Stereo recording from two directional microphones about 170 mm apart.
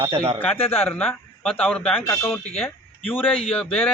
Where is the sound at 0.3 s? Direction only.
10° left (ahead or behind).